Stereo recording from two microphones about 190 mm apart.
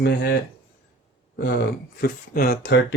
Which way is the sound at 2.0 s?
55° left (ahead or behind).